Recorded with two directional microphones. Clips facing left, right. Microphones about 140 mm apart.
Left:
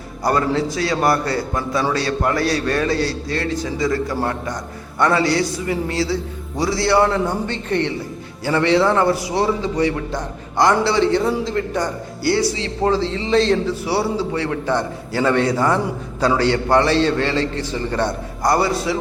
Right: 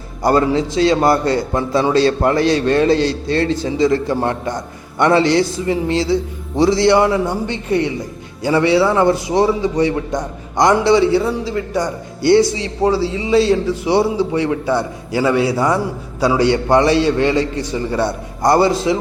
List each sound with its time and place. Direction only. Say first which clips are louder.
0.2 s a man's voice: right 4 dB; 25° right (ahead or behind); by 9.0 s 10° right (ahead or behind)
9.0 s a man's voice: right 4 dB; 20° right (ahead or behind)
12.2 s a man's voice: right 7 dB; 20° right (ahead or behind)
18.4 s a man's voice: right 5 dB; 25° right (ahead or behind)